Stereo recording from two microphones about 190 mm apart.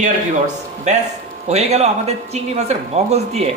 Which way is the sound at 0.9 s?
35° right (ahead or behind).